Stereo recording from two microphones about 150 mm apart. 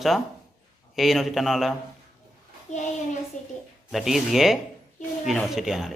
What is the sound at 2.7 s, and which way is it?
Speech, 50° left (ahead or behind).